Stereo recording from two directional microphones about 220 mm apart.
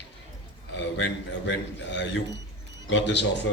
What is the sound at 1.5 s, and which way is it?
A man's voice, 55° left (ahead or behind).